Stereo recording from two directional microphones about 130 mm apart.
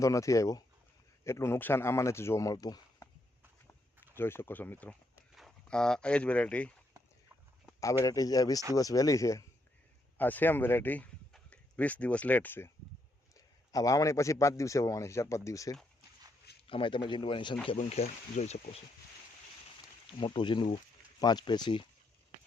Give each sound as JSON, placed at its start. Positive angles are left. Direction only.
{"t": 0.0, "sound": "a man's voice", "side_deg": 25}
{"t": 3.7, "sound": "a sound", "side_deg": 15}
{"t": 5.3, "sound": "speech", "side_deg": 0}
{"t": 8.0, "sound": "a man's voice", "side_deg": 25}
{"t": 16.6, "sound": "a man's voice", "side_deg": 40}
{"t": 17.7, "sound": "speech", "side_deg": 55}
{"t": 20.1, "sound": "a man's voice", "side_deg": 40}